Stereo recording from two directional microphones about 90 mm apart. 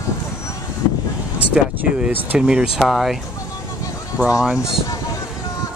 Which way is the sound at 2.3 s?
10° right (ahead or behind).